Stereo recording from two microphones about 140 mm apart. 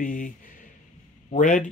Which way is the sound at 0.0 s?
75° left (ahead or behind).